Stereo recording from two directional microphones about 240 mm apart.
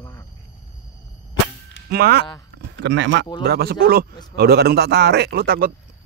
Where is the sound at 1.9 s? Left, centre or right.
Right.